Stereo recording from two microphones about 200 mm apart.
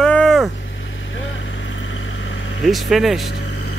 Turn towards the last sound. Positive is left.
turn(degrees=0)  # may be behind; listen again after turning